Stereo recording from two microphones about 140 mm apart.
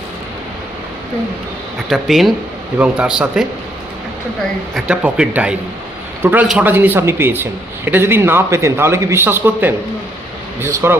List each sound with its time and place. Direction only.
1.9 s a man's voice: centre (ahead or behind)
4.7 s a man's voice: 5° right (ahead or behind)